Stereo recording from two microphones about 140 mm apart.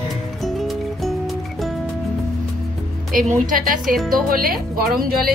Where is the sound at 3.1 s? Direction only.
80° right.